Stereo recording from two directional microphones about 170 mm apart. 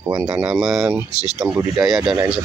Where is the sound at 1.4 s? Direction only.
20° right (ahead or behind).